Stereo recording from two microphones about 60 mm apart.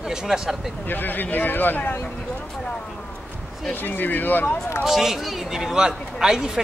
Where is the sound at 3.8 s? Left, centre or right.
Left.